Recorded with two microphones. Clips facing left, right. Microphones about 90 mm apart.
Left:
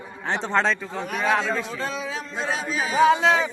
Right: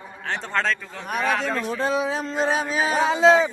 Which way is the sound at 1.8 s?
60° right (ahead or behind).